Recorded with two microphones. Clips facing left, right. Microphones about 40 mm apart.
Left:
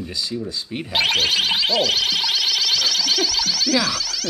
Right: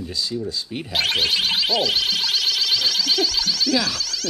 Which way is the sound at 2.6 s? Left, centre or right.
Centre.